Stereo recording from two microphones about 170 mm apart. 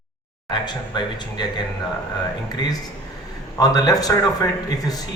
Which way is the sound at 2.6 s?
25° left (ahead or behind).